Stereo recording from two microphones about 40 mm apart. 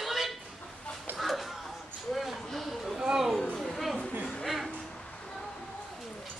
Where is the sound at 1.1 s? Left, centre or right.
Centre.